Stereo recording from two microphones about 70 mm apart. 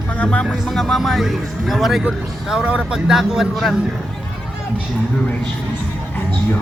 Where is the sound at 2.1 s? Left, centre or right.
Centre.